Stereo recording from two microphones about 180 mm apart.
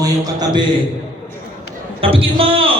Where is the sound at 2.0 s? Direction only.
30° right (ahead or behind).